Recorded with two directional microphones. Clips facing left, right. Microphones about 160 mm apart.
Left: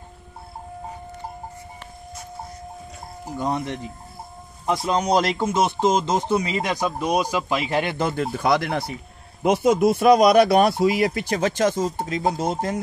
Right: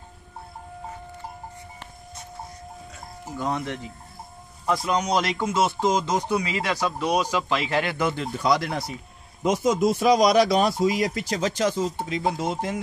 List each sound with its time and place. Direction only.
3.3 s speech: 15° left (ahead or behind)
4.6 s speech: 30° left (ahead or behind)
5.5 s speech: 20° left (ahead or behind)
8.1 s speech: 55° left (ahead or behind)